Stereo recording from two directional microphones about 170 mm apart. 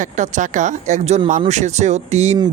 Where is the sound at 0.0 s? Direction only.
45° right (ahead or behind).